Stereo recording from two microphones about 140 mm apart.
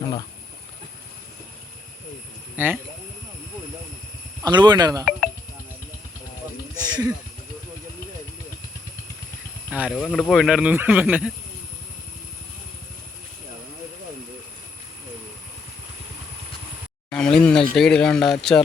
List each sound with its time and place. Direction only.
2.6 s speech: 15° right (ahead or behind)
4.4 s speech: 30° right (ahead or behind)
6.7 s snake: 30° right (ahead or behind)
9.6 s a sound: 10° right (ahead or behind)
9.9 s speech: 5° left (ahead or behind); by 11.3 s 10° right (ahead or behind)
17.1 s speech: 5° left (ahead or behind)